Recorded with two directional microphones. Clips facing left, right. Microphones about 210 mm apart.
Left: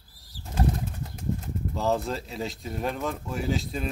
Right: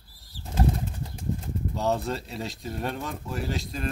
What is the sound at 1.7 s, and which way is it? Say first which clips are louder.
Speech: left 1 dB; centre (ahead or behind).